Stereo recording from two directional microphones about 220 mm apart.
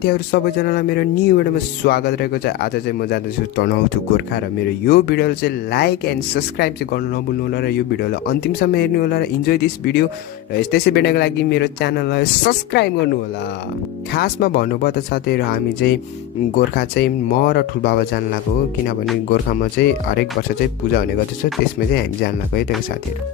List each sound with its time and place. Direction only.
0.0 s speech: 45° left (ahead or behind)
4.8 s speech: 45° left (ahead or behind)
14.1 s speech: 45° left (ahead or behind)
19.5 s speech: 40° left (ahead or behind)
21.9 s speech: 45° left (ahead or behind)